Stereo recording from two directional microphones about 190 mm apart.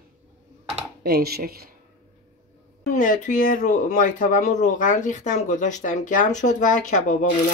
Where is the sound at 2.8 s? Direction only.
45° left (ahead or behind).